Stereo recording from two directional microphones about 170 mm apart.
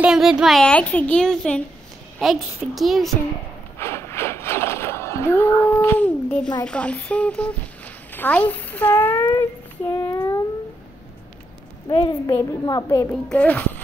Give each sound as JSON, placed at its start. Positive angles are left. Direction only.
{"t": 0.0, "sound": "speech", "side_deg": -5}
{"t": 3.8, "sound": "a sound", "side_deg": 15}
{"t": 6.6, "sound": "a child's voice", "side_deg": 5}
{"t": 10.1, "sound": "a sound", "side_deg": 15}
{"t": 11.9, "sound": "a child's voice", "side_deg": 30}
{"t": 13.1, "sound": "a child's voice", "side_deg": 5}